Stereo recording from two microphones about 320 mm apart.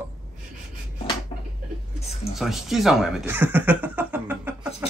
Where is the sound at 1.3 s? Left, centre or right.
Centre.